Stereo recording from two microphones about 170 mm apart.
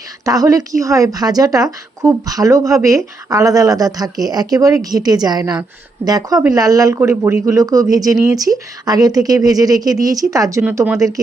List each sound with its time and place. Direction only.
0.3 s a woman's voice: 20° right (ahead or behind)